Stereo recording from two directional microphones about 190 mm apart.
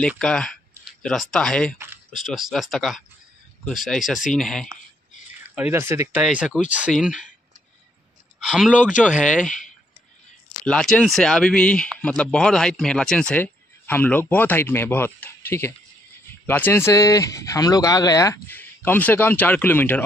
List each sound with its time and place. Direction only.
0.2 s speech: 5° left (ahead or behind)
5.4 s speech: 5° right (ahead or behind)
8.4 s speech: centre (ahead or behind)
9.4 s speech: 40° left (ahead or behind)
10.6 s speech: 5° left (ahead or behind)